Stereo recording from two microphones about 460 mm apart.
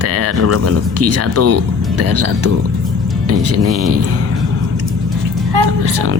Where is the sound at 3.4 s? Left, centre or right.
Right.